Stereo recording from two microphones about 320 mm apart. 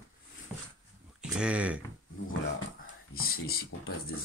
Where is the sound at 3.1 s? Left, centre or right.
Left.